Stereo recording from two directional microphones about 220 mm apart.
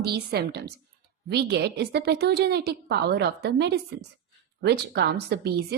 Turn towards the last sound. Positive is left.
turn(degrees=-45)  # may be behind; listen again after turning